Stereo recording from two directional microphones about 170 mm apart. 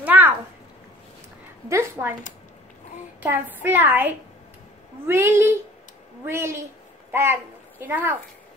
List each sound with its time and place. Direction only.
0.0 s a sound: 10° right (ahead or behind)
1.7 s a woman's voice: 15° right (ahead or behind)
3.2 s a woman's voice: 10° right (ahead or behind)